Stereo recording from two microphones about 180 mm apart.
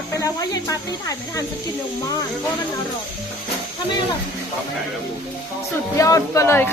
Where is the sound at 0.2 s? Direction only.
20° left (ahead or behind).